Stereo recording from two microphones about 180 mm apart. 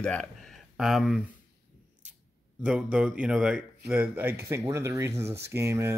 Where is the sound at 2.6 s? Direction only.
5° right (ahead or behind).